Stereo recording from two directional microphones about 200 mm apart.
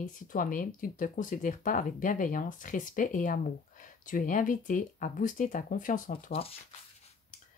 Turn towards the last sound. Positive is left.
turn(degrees=45)  # may be behind; listen again after turning